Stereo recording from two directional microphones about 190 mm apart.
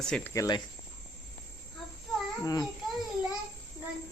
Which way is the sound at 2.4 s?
20° left (ahead or behind).